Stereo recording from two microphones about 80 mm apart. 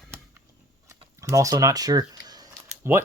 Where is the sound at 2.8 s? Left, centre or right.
Right.